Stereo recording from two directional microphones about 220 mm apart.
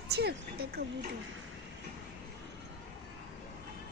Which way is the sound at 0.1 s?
50° right (ahead or behind).